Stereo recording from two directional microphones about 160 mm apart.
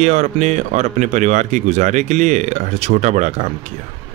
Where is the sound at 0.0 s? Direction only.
45° right (ahead or behind).